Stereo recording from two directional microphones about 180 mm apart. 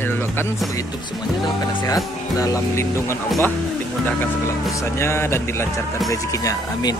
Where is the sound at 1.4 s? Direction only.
25° left (ahead or behind).